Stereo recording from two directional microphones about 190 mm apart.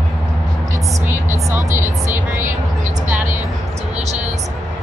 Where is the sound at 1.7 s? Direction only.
10° right (ahead or behind).